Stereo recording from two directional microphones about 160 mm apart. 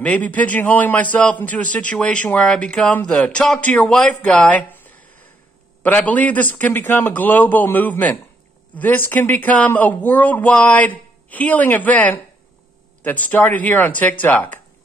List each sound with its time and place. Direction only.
0.0 s a man's voice: 10° left (ahead or behind)